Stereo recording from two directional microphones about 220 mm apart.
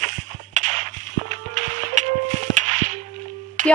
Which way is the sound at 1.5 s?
35° right (ahead or behind).